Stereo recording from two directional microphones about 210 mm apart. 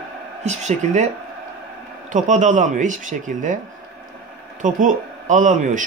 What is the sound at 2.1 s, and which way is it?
Speech, 35° right (ahead or behind).